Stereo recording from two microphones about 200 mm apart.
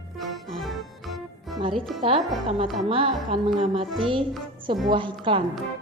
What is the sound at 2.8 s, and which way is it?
A woman's voice, 25° right (ahead or behind).